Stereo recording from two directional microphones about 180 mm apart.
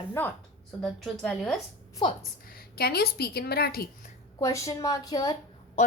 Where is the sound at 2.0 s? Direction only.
25° left (ahead or behind).